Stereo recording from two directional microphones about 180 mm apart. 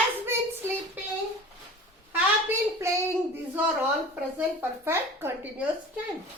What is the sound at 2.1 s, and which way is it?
Speech, 15° right (ahead or behind).